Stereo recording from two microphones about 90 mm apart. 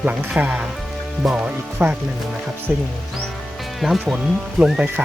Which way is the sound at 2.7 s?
15° right (ahead or behind).